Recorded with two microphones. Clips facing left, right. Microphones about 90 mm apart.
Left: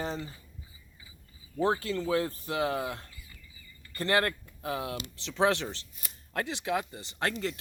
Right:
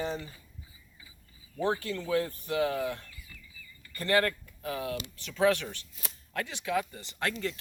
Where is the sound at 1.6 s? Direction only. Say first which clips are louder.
Left 2 dB; 35° left (ahead or behind).